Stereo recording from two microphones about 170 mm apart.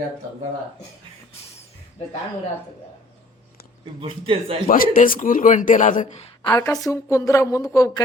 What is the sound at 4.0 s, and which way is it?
Speech, 30° right (ahead or behind).